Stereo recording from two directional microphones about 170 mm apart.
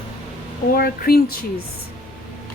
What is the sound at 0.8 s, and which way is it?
Speech, 65° left (ahead or behind).